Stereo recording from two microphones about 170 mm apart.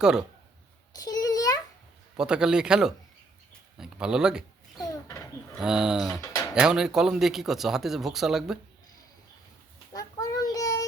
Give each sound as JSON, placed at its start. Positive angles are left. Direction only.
{"t": 0.0, "sound": "speech", "side_deg": -5}
{"t": 0.9, "sound": "a sound", "side_deg": 20}
{"t": 2.1, "sound": "speech", "side_deg": -5}
{"t": 4.8, "sound": "a sound", "side_deg": 20}
{"t": 5.5, "sound": "speech", "side_deg": -5}
{"t": 9.9, "sound": "child singing", "side_deg": 20}